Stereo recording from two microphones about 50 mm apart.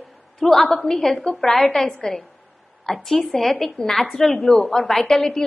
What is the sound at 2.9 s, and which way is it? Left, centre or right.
A woman's voice, centre.